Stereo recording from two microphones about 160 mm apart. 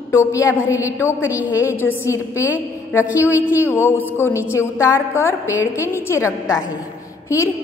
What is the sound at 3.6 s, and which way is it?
A woman's voice, 15° left (ahead or behind).